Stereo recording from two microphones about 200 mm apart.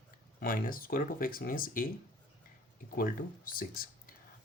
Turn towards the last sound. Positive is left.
turn(degrees=45)  # may be behind; listen again after turning